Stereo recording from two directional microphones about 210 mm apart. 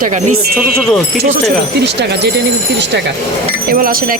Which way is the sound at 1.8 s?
55° right (ahead or behind).